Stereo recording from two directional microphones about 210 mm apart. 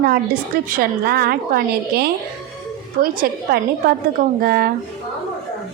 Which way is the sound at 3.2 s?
45° right (ahead or behind).